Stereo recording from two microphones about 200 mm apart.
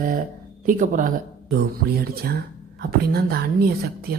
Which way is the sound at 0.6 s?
40° right (ahead or behind).